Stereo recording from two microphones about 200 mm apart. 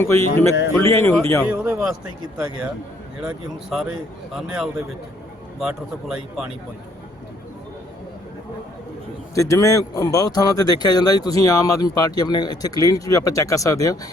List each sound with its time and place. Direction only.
0.0 s speech: 15° left (ahead or behind)
1.5 s a man's voice: 5° right (ahead or behind)
3.2 s a man's voice: 5° right (ahead or behind)
9.3 s speech: 15° left (ahead or behind)